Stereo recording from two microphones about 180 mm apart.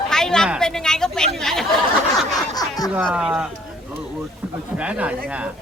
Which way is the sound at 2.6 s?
20° left (ahead or behind).